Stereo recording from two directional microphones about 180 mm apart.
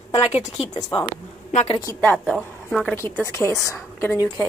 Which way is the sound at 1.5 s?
40° left (ahead or behind).